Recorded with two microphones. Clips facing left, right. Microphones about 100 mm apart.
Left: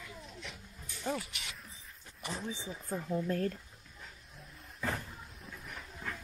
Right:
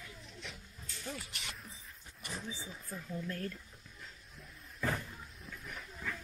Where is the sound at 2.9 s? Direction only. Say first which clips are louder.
Left 8 dB; 40° left (ahead or behind).